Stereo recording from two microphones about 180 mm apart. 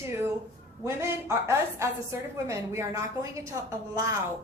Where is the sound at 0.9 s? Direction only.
15° right (ahead or behind).